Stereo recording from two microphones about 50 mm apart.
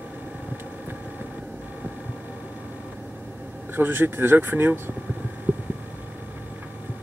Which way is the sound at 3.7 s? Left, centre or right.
Right.